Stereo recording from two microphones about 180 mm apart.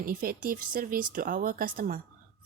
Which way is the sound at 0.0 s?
55° right (ahead or behind).